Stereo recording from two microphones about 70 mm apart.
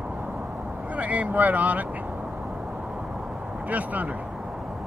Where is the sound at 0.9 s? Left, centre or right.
Right.